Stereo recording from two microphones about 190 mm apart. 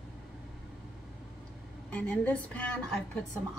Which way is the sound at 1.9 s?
10° left (ahead or behind).